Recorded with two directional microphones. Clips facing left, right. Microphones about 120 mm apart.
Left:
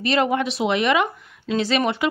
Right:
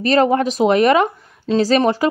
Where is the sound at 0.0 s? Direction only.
40° right (ahead or behind).